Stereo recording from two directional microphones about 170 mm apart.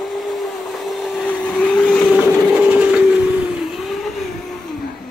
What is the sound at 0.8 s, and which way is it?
Vehicle, centre (ahead or behind).